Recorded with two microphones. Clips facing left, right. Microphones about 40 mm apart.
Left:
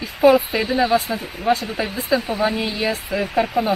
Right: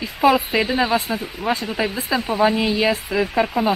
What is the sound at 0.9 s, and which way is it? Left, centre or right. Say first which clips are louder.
Speech: left 1 dB; centre.